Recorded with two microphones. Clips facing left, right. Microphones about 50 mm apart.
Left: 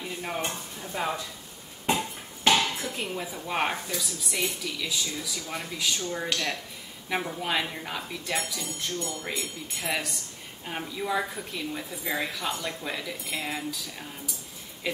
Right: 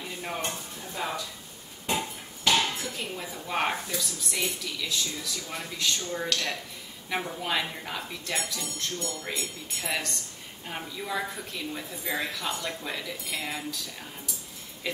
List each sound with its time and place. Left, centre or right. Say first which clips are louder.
0.2 s a woman's voice: left 1 dB; centre
0.9 s speech: left 3 dB; left
3.0 s a woman's voice: left 3 dB; centre